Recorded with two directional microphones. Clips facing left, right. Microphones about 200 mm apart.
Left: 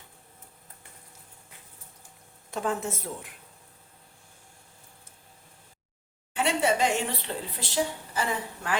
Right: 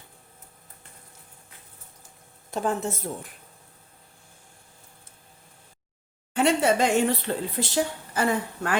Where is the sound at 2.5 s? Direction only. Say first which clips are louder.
Right 3 dB; 35° right (ahead or behind).